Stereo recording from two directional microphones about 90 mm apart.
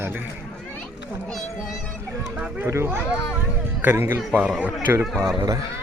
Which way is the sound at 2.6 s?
30° right (ahead or behind).